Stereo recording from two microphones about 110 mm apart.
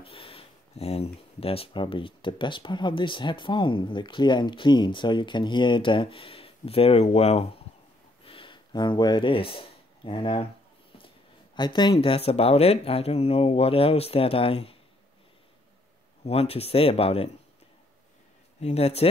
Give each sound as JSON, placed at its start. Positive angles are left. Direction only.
{"t": 0.0, "sound": "speech", "side_deg": 55}
{"t": 8.3, "sound": "speech", "side_deg": 50}
{"t": 11.5, "sound": "speech", "side_deg": 40}
{"t": 11.9, "sound": "speech", "side_deg": 60}
{"t": 16.3, "sound": "speech", "side_deg": 65}
{"t": 18.6, "sound": "speech", "side_deg": 70}